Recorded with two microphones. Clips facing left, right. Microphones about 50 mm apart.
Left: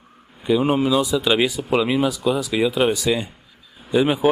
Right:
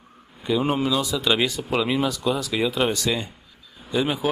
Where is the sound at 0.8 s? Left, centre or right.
Centre.